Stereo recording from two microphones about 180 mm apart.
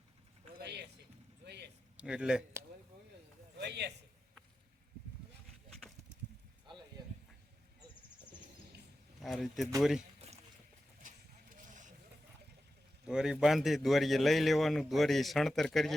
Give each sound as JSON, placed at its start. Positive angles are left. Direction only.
{"t": 0.6, "sound": "a sound", "side_deg": -70}
{"t": 2.0, "sound": "a man's voice", "side_deg": -5}
{"t": 3.6, "sound": "a man's voice", "side_deg": -70}
{"t": 9.2, "sound": "a man's voice", "side_deg": 0}
{"t": 11.0, "sound": "a sound", "side_deg": -45}
{"t": 13.1, "sound": "a man's voice", "side_deg": -5}